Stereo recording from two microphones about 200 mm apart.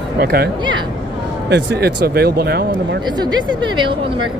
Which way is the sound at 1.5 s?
55° right (ahead or behind).